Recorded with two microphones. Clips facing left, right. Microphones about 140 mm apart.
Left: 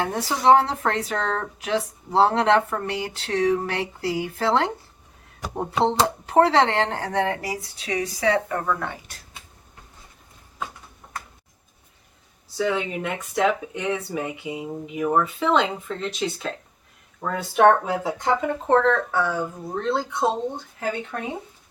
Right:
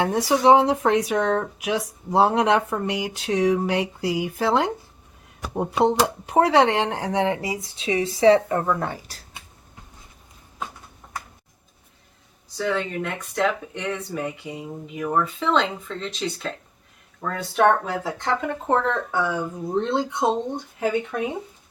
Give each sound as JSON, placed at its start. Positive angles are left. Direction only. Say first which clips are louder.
{"t": 0.0, "sound": "speech", "louder": "right 3 dB", "side_deg": -15}
{"t": 8.8, "sound": "speech", "louder": "right 3 dB", "side_deg": -35}
{"t": 12.5, "sound": "speech", "louder": "left 1 dB", "side_deg": 5}
{"t": 19.7, "sound": "speech", "louder": "right 2 dB", "side_deg": -25}